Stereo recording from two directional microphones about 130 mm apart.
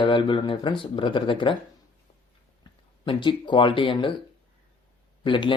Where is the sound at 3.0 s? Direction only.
40° left (ahead or behind).